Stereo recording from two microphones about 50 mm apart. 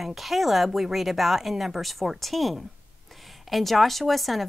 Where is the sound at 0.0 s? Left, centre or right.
Centre.